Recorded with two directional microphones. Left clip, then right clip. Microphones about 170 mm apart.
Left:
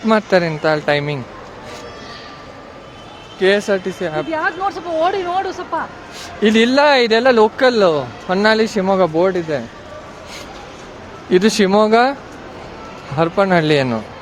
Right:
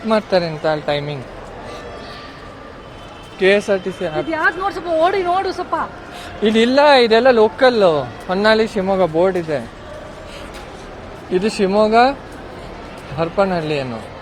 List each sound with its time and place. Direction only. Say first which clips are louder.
0.1 s speech: left 2 dB; 40° left (ahead or behind)
3.4 s speech: even; 15° left (ahead or behind)
4.3 s speech: right 3 dB; 10° right (ahead or behind)
6.4 s speech: even; 30° left (ahead or behind)
11.3 s speech: left 4 dB; 45° left (ahead or behind)
13.1 s speech: left 3 dB; 45° left (ahead or behind)